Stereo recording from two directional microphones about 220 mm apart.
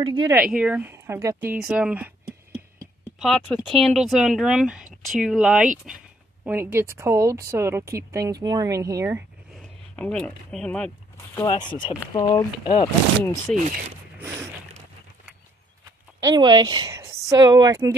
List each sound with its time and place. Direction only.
0.0 s speech: 20° right (ahead or behind)
0.3 s speech: 5° right (ahead or behind)
3.2 s speech: centre (ahead or behind)
9.6 s speech: 5° left (ahead or behind)
11.3 s speech: 15° left (ahead or behind)
13.2 s speech: 10° left (ahead or behind)
14.1 s a sound: 10° right (ahead or behind)
16.2 s speech: 15° right (ahead or behind)